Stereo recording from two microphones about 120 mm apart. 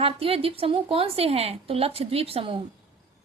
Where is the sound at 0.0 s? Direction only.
50° right (ahead or behind).